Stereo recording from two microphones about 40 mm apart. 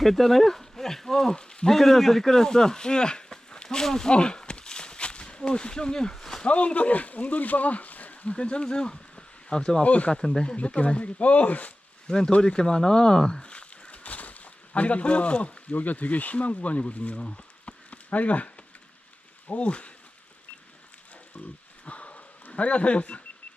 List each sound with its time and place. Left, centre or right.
0.0 s speech: centre
1.4 s speech: left
1.7 s speech: centre
3.8 s a sound: centre
6.4 s speech: left
9.8 s speech: left
10.1 s speech: centre; by 11.7 s left
12.0 s speech: left
13.5 s speech: left
17.2 s a sound: left
17.9 s speech: left
21.3 s a sound: left